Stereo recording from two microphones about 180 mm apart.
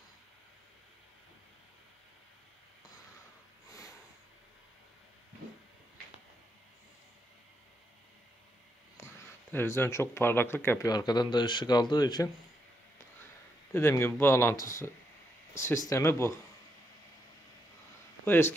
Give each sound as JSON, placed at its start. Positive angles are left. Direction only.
{"t": 9.0, "sound": "a sound", "side_deg": 10}
{"t": 9.5, "sound": "speech", "side_deg": 10}
{"t": 13.7, "sound": "speech", "side_deg": 10}
{"t": 18.2, "sound": "speech", "side_deg": 10}